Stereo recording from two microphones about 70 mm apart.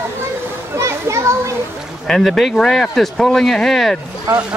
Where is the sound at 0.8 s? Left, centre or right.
Right.